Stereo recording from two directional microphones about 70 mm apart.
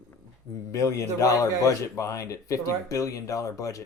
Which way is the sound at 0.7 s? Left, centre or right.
Left.